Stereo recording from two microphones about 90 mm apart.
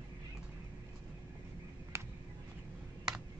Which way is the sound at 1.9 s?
30° right (ahead or behind).